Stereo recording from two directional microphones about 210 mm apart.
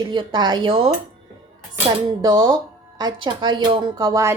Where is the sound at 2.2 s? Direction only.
15° right (ahead or behind).